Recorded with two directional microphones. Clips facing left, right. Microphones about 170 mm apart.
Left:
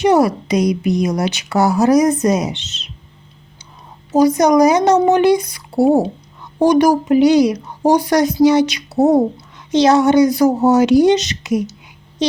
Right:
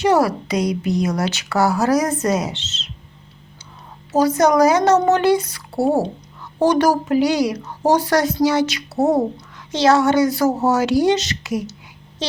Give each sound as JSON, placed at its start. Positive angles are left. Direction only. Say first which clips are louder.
{"t": 0.0, "sound": "a woman's voice", "louder": "left 3 dB", "side_deg": 20}
{"t": 4.1, "sound": "a woman's voice", "louder": "left 4 dB", "side_deg": 15}